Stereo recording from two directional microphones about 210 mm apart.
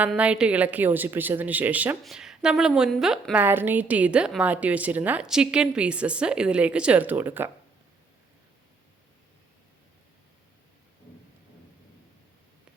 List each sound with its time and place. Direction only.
0.0 s a woman's voice: 5° right (ahead or behind)